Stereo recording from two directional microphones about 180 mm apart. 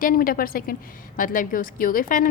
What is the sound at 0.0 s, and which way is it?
A woman's voice, 50° left (ahead or behind).